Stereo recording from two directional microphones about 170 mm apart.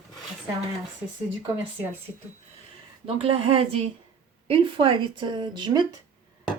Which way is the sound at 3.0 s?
35° right (ahead or behind).